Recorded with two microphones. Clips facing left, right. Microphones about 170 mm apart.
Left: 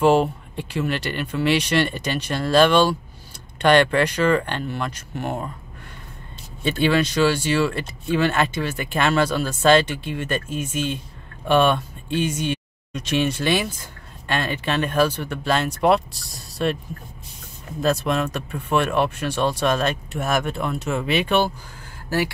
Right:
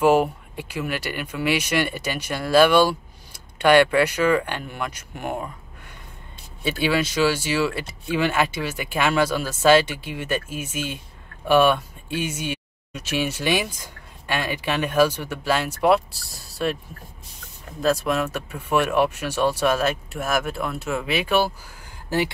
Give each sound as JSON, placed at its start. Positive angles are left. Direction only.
{"t": 0.0, "sound": "speech", "side_deg": -10}
{"t": 6.6, "sound": "speech", "side_deg": -5}
{"t": 17.8, "sound": "speech", "side_deg": 0}